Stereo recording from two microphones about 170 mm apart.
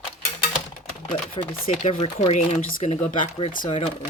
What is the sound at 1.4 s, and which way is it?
Speech, 30° left (ahead or behind).